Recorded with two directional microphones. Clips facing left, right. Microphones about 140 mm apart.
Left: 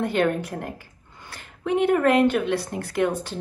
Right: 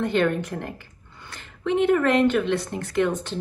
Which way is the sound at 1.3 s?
10° left (ahead or behind).